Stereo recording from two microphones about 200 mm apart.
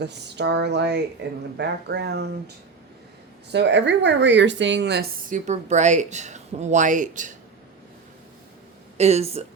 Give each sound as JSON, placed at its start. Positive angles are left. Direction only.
{"t": 0.0, "sound": "speech", "side_deg": -60}
{"t": 3.5, "sound": "speech", "side_deg": -60}
{"t": 5.5, "sound": "speech", "side_deg": -35}
{"t": 9.0, "sound": "speech", "side_deg": -30}